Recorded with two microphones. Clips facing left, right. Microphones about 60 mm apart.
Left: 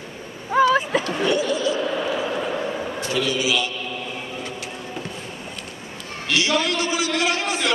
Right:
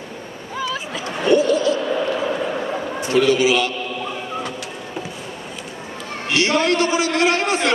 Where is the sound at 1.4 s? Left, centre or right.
Right.